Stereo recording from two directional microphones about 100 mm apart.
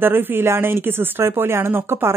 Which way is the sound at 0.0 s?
20° right (ahead or behind).